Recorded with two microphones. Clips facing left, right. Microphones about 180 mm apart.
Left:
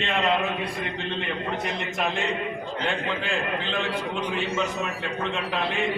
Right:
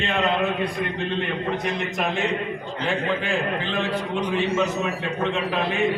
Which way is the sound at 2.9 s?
Centre (ahead or behind).